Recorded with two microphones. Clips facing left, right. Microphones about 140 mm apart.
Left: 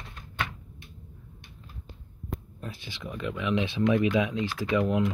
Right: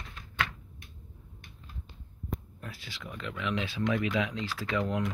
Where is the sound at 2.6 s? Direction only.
20° left (ahead or behind).